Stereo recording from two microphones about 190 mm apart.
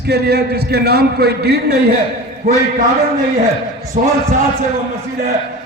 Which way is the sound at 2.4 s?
35° right (ahead or behind).